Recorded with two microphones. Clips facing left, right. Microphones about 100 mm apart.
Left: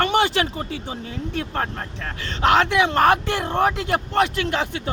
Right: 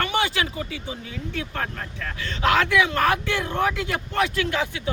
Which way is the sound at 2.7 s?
30° left (ahead or behind).